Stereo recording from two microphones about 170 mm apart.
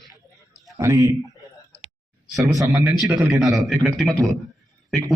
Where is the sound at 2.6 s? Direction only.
20° right (ahead or behind).